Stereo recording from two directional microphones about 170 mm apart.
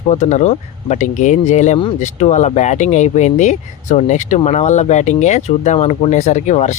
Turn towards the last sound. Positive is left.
turn(degrees=45)  # may be behind; listen again after turning